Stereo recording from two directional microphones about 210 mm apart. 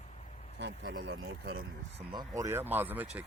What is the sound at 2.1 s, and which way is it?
Speech, 20° right (ahead or behind).